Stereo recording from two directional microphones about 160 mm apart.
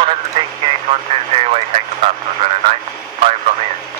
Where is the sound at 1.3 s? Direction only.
40° right (ahead or behind).